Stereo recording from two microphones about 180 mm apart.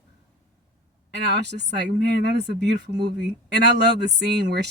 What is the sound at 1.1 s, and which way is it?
Speech, 70° right (ahead or behind).